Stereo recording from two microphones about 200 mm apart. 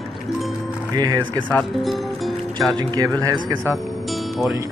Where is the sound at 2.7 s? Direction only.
20° right (ahead or behind).